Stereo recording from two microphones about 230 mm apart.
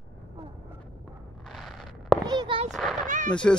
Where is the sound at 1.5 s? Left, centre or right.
Centre.